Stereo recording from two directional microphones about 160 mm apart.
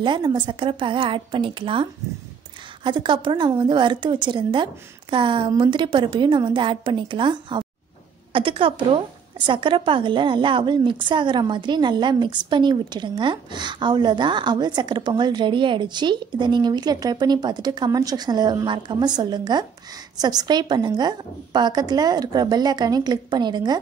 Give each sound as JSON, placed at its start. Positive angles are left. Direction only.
{"t": 0.0, "sound": "a woman's voice", "side_deg": -30}